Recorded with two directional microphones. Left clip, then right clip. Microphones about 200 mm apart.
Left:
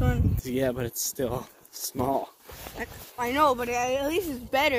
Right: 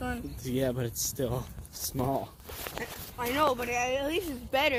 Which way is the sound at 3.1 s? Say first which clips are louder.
Left 4 dB; 65° left (ahead or behind).